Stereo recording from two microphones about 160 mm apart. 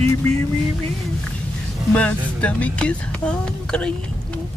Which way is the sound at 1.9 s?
10° left (ahead or behind).